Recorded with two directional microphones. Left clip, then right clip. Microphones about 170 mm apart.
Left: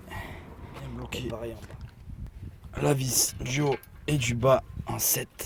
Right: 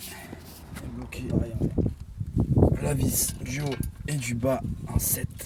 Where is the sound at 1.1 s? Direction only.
15° left (ahead or behind).